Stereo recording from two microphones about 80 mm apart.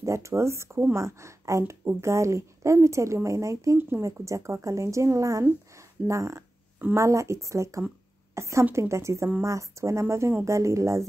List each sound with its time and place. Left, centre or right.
0.0 s speech: right